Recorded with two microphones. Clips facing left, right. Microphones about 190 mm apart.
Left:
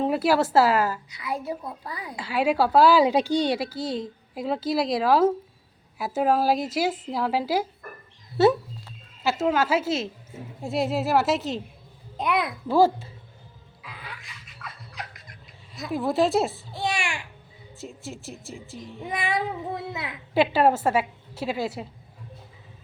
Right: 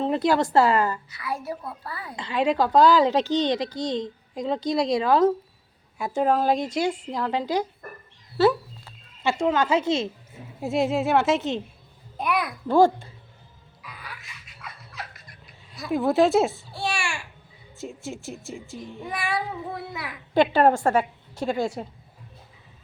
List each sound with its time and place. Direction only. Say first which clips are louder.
0.0 s speech: even; 5° left (ahead or behind)
1.1 s a woman's voice: left 1 dB; 20° left (ahead or behind)
9.2 s a woman's voice: right 1 dB; 5° left (ahead or behind)
12.1 s a child's voice: left 1 dB; 20° left (ahead or behind)
12.6 s a woman's voice: right 2 dB; 5° left (ahead or behind)
13.8 s a sound: even; 25° left (ahead or behind)
14.6 s music: even; centre (ahead or behind)
14.9 s fowl: even; 20° left (ahead or behind)
15.9 s a woman's voice: right 3 dB; centre (ahead or behind)
16.7 s a sound: left 1 dB; 20° left (ahead or behind)
17.7 s a woman's voice: right 3 dB; centre (ahead or behind)
19.0 s child singing: left 2 dB; 20° left (ahead or behind)
20.3 s a woman's voice: right 2 dB; 5° left (ahead or behind)